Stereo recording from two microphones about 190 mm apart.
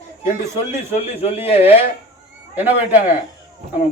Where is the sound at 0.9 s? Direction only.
30° left (ahead or behind).